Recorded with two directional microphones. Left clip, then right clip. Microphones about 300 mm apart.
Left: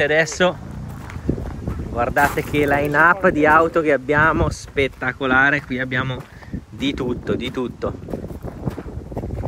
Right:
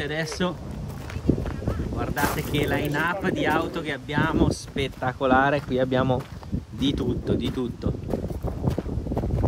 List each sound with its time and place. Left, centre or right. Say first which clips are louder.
0.0 s speech: left 11 dB; centre
2.0 s speech: left 10 dB; centre